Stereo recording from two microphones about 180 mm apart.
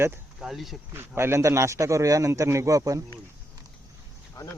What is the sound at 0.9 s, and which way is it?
A man's voice, 15° right (ahead or behind).